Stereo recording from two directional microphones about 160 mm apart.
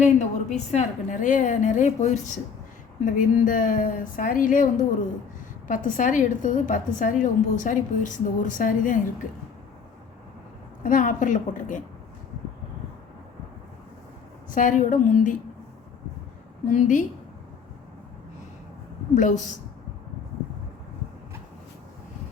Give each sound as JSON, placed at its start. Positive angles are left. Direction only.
{"t": 0.0, "sound": "a woman's voice", "side_deg": 45}
{"t": 10.8, "sound": "a woman's voice", "side_deg": 55}
{"t": 14.5, "sound": "a woman's voice", "side_deg": 55}
{"t": 16.6, "sound": "a woman's voice", "side_deg": 55}
{"t": 19.1, "sound": "a woman's voice", "side_deg": 50}